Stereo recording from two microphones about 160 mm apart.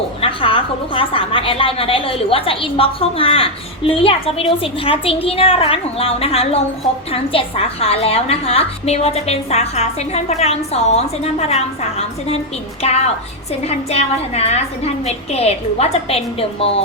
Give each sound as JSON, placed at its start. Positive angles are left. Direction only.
{"t": 0.2, "sound": "a woman's voice", "side_deg": 35}